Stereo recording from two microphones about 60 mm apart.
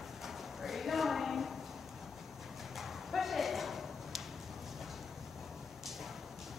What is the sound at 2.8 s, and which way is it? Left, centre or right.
Clip-clop, centre.